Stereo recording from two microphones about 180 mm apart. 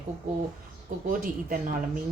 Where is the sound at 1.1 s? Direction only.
50° right (ahead or behind).